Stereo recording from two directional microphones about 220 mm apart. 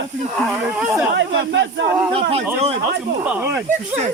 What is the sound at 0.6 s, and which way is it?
Speech, 5° right (ahead or behind).